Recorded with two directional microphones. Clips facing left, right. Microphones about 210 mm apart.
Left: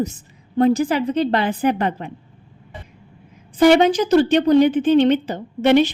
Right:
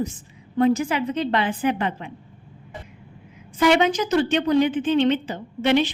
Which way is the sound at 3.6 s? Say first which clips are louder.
Left 5 dB; 35° left (ahead or behind).